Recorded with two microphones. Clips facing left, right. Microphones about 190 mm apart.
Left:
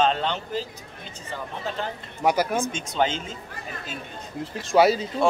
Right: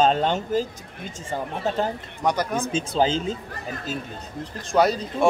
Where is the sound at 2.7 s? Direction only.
35° right (ahead or behind).